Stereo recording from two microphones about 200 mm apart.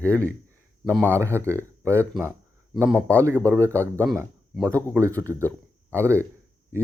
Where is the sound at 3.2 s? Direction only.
15° right (ahead or behind).